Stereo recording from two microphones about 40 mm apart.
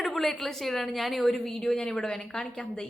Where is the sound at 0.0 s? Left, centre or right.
Centre.